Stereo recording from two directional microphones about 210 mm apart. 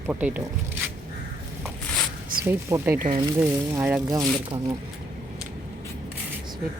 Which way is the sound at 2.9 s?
40° right (ahead or behind).